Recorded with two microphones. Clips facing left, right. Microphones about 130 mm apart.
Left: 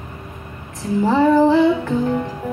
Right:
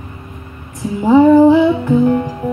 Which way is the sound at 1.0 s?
15° right (ahead or behind).